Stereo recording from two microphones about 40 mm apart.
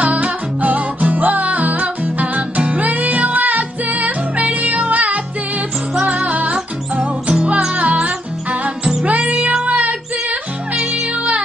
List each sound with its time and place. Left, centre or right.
0.0 s music: right
10.7 s music: centre